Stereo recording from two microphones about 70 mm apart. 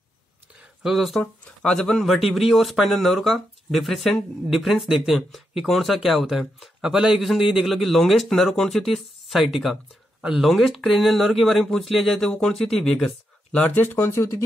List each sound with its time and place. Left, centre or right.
0.8 s speech: centre
1.2 s speech: centre
2.0 s speech: centre
13.7 s speech: left